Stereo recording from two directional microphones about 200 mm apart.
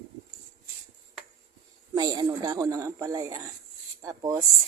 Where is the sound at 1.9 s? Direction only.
20° right (ahead or behind).